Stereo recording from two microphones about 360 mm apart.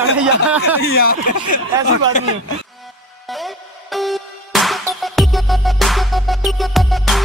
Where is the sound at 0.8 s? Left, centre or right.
Left.